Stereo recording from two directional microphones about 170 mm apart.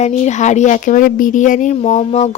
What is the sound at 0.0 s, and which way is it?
A woman's voice, 45° left (ahead or behind).